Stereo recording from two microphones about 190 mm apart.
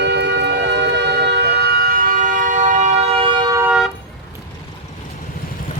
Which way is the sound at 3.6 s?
5° right (ahead or behind).